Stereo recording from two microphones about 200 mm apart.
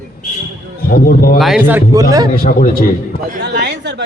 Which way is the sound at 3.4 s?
55° right (ahead or behind).